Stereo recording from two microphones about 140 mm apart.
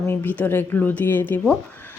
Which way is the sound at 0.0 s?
15° left (ahead or behind).